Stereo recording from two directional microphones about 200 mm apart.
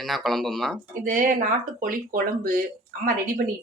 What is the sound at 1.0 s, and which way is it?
Speech, 40° right (ahead or behind).